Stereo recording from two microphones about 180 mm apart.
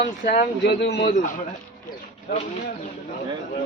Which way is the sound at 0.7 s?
70° left (ahead or behind).